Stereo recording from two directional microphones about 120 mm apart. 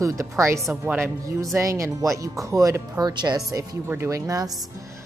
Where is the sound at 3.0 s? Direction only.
35° right (ahead or behind).